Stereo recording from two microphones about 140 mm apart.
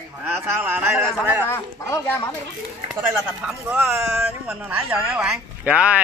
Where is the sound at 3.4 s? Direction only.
15° right (ahead or behind).